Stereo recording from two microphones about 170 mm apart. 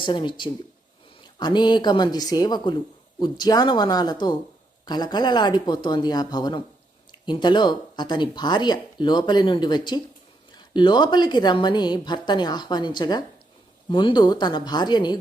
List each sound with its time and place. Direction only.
0.0 s speech: 30° left (ahead or behind)